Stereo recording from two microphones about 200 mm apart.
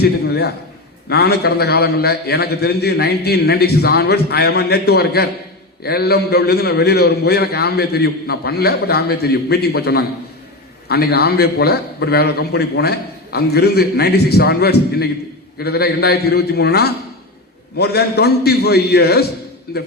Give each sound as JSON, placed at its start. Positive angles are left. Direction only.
{"t": 0.0, "sound": "a man's voice", "side_deg": 55}